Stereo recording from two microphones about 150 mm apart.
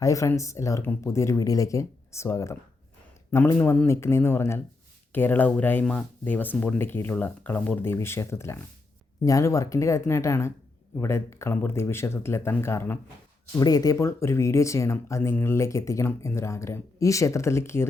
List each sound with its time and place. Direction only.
0.0 s speech: 20° left (ahead or behind)
3.6 s speech: 15° left (ahead or behind)